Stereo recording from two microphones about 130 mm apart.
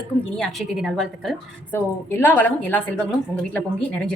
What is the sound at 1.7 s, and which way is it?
A woman's voice, 20° left (ahead or behind).